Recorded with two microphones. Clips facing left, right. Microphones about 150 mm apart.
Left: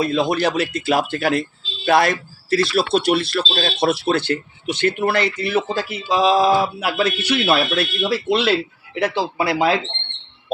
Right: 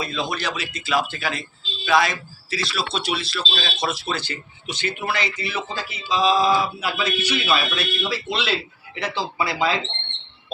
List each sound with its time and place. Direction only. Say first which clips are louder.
0.0 s speech: left 8 dB; 55° left (ahead or behind)